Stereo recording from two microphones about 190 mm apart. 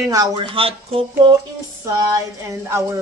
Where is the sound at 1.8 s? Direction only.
20° right (ahead or behind).